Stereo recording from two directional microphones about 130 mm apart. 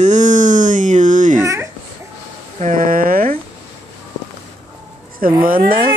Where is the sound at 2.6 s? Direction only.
85° right.